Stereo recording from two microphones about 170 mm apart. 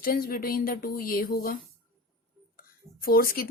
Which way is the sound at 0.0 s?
60° left (ahead or behind).